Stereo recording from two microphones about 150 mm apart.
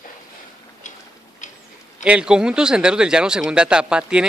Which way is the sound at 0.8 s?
55° left (ahead or behind).